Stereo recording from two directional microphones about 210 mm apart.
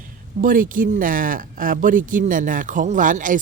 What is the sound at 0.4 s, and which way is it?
Speech, 40° right (ahead or behind).